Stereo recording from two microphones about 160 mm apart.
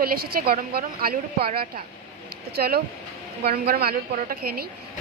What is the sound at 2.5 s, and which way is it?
A woman's voice, 75° right (ahead or behind).